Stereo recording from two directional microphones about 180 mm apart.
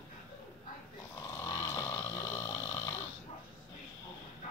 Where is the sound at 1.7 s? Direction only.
20° left (ahead or behind).